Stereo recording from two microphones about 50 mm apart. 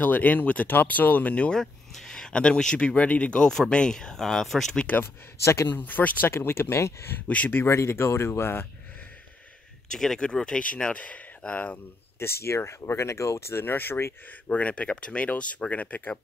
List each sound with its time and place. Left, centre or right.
0.0 s speech: left
1.5 s speech: centre
5.0 s speech: left
5.8 s speech: left
6.3 s speech: left
7.2 s speech: left
7.7 s speech: left
9.9 s speech: centre
10.9 s speech: left
12.2 s speech: left
13.6 s speech: left
14.2 s speech: left